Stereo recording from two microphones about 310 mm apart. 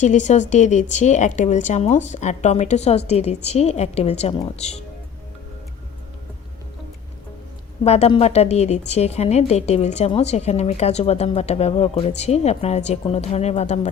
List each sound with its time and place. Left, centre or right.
0.0 s a woman's voice: left
7.9 s a woman's voice: centre